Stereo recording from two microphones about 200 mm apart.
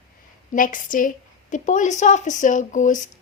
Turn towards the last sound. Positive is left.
turn(degrees=40)  # may be behind; listen again after turning